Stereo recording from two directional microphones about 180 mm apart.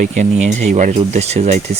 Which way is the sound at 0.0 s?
40° right (ahead or behind).